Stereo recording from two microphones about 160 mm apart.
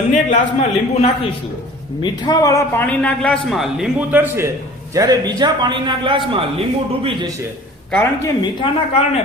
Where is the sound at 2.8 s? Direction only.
5° left (ahead or behind); by 7.3 s 35° right (ahead or behind).